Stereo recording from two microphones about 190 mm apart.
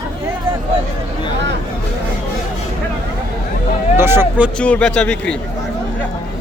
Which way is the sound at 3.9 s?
10° right (ahead or behind).